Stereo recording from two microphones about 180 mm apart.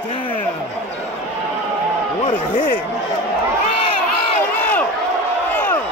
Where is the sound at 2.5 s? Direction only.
50° left (ahead or behind).